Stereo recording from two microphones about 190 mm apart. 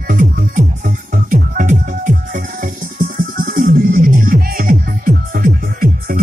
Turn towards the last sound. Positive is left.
turn(degrees=-50)  # may be behind; listen again after turning